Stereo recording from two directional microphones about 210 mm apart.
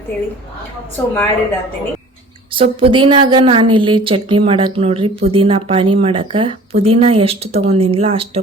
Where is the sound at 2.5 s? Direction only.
25° right (ahead or behind).